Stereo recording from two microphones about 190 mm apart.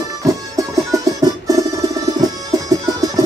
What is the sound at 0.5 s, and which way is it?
Music, 15° right (ahead or behind).